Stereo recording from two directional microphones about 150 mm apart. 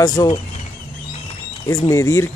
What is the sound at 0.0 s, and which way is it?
Speech, 25° left (ahead or behind).